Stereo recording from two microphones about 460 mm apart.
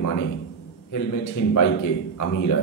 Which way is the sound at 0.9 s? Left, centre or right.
Left.